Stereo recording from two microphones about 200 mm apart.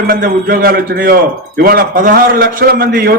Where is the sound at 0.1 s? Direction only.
45° right (ahead or behind).